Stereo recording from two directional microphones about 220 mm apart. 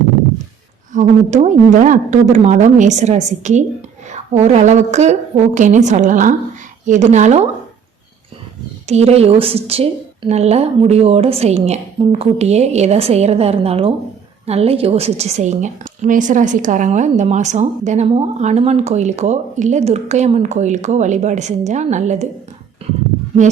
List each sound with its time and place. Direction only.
0.9 s a woman's voice: 35° right (ahead or behind)
8.9 s a woman's voice: 30° right (ahead or behind)